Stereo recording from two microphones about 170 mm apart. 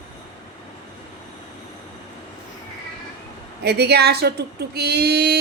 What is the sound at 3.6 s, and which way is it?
Speech, 75° right (ahead or behind).